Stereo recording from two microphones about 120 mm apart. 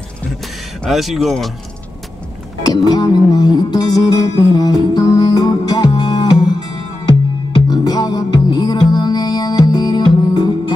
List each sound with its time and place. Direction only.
0.8 s speech: centre (ahead or behind)
2.6 s music: 35° left (ahead or behind)